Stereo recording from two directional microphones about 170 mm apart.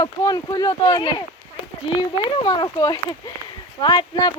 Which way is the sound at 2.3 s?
30° left (ahead or behind).